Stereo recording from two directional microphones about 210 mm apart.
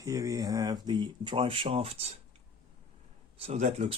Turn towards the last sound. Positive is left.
turn(degrees=-30)  # may be behind; listen again after turning